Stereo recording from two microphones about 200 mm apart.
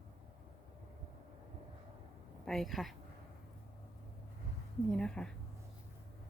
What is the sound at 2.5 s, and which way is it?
Speech, centre (ahead or behind).